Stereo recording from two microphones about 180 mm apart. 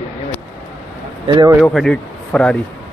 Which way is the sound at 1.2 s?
25° right (ahead or behind).